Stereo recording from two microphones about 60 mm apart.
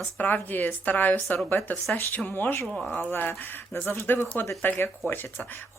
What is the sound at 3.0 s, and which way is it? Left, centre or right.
Speech, left.